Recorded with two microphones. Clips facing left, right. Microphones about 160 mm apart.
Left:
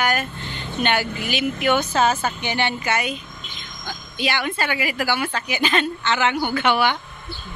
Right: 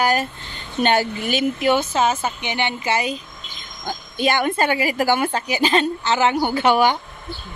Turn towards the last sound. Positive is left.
turn(degrees=-40)  # may be behind; listen again after turning